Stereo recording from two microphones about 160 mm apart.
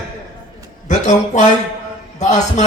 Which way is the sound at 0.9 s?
50° left (ahead or behind).